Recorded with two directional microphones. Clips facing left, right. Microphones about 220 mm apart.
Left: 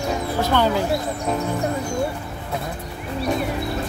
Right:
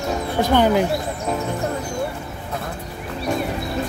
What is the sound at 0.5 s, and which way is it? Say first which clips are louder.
Speech: right 4 dB; 15° right (ahead or behind).